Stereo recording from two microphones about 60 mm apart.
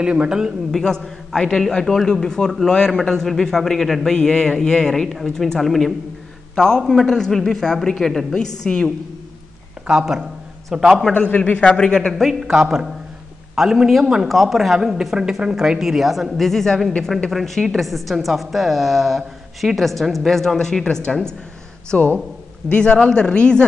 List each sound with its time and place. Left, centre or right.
0.0 s a man's voice: centre
0.4 s a man's voice: centre
9.8 s a man's voice: centre
11.1 s a man's voice: left
12.1 s a woman's voice: centre
12.4 s a man's voice: centre
21.9 s a man's voice: left